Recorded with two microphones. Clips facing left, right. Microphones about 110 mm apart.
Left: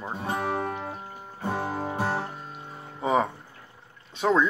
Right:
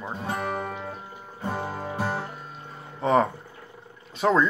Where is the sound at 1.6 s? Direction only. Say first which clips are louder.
Left 2 dB; 15° left (ahead or behind).